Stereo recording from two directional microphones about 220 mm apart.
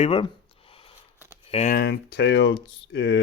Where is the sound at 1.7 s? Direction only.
45° left (ahead or behind).